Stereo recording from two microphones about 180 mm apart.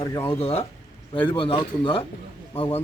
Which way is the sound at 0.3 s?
35° left (ahead or behind).